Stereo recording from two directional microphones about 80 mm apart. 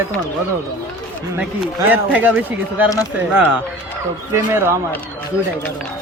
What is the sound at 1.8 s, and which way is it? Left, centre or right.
A man's voice, right.